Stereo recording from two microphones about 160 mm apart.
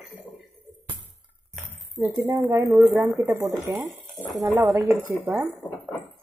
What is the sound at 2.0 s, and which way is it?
Speech, 15° right (ahead or behind).